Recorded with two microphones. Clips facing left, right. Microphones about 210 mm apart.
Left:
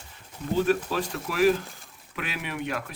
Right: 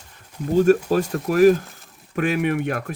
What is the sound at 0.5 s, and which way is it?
Speech, 45° right (ahead or behind).